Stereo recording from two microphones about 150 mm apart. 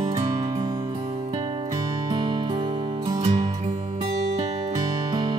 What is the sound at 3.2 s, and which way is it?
Music, 50° right (ahead or behind).